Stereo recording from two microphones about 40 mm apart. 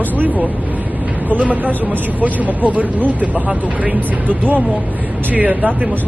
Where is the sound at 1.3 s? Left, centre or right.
Right.